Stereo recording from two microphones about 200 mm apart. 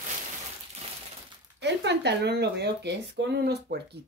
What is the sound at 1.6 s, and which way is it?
Speech, 60° right (ahead or behind).